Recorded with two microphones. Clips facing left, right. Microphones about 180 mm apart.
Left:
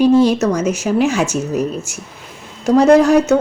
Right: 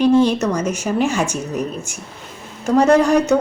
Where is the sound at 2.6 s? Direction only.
10° left (ahead or behind).